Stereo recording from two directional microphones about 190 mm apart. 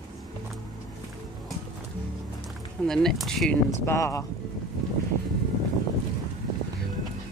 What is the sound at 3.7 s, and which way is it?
Speech, 15° left (ahead or behind).